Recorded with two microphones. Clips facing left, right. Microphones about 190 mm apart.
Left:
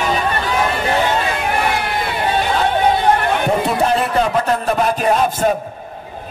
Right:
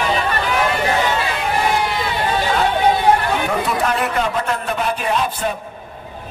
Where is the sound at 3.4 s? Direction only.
30° left (ahead or behind); by 5.5 s 45° left (ahead or behind).